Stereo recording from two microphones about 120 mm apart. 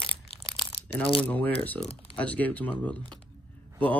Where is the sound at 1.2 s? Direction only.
15° left (ahead or behind).